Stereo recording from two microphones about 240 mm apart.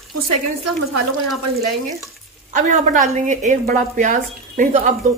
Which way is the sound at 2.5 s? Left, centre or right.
Right.